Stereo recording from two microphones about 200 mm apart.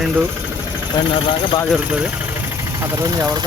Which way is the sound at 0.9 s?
20° left (ahead or behind).